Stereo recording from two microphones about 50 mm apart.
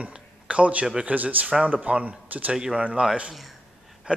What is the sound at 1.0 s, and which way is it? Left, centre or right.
Speech, right.